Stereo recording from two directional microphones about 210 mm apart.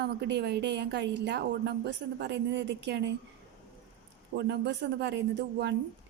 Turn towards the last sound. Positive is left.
turn(degrees=-55)  # may be behind; listen again after turning